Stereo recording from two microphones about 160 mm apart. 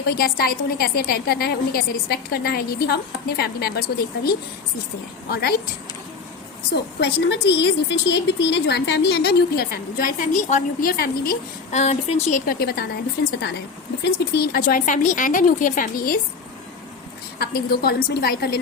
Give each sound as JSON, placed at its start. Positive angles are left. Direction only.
{"t": 0.2, "sound": "a woman's voice", "side_deg": 70}
{"t": 6.7, "sound": "a woman's voice", "side_deg": 90}
{"t": 11.7, "sound": "speech", "side_deg": 45}
{"t": 12.3, "sound": "a woman's voice", "side_deg": 75}
{"t": 14.0, "sound": "speech", "side_deg": 80}
{"t": 17.4, "sound": "a woman's voice", "side_deg": 75}